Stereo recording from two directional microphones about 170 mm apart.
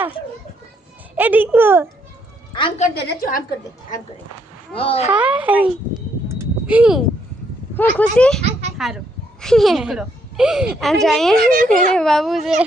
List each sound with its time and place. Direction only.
1.1 s a child's voice: 10° right (ahead or behind)
2.5 s a woman's voice: 30° left (ahead or behind)
2.9 s a woman's voice: 75° left (ahead or behind); by 3.4 s 55° left (ahead or behind)
4.7 s a child's voice: 35° left (ahead or behind)
5.1 s a child's voice: 10° right (ahead or behind)
6.7 s a woman's voice: 5° right (ahead or behind)
7.8 s speech: 10° left (ahead or behind)
8.4 s a sound: 40° right (ahead or behind)
9.4 s a woman's voice: centre (ahead or behind)
11.3 s a child's voice: 55° right (ahead or behind)
11.9 s a woman's voice: 5° left (ahead or behind)